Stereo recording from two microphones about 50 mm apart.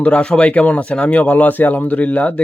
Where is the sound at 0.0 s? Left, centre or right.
Left.